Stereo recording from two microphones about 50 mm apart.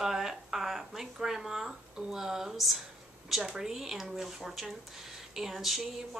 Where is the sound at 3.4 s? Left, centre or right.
Centre.